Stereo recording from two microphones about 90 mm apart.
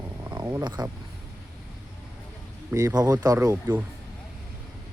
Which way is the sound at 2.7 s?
40° right (ahead or behind).